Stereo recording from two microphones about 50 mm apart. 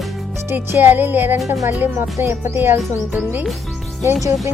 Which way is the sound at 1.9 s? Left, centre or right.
Right.